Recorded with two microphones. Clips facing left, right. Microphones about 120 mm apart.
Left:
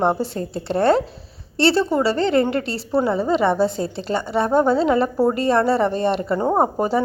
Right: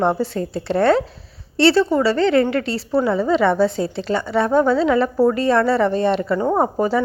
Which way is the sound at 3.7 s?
45° left (ahead or behind).